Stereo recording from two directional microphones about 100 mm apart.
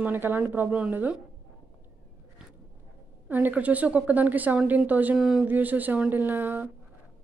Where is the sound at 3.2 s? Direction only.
20° right (ahead or behind).